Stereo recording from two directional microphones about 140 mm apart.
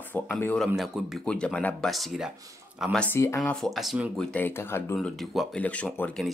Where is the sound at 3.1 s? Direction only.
20° left (ahead or behind).